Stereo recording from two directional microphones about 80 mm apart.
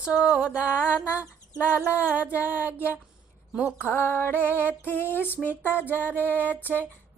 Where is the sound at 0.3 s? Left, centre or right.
Centre.